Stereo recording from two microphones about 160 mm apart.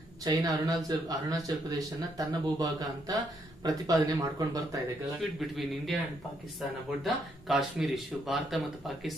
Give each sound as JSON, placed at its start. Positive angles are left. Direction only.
{"t": 0.2, "sound": "speech", "side_deg": -25}
{"t": 5.2, "sound": "speech", "side_deg": 0}
{"t": 7.0, "sound": "speech", "side_deg": 0}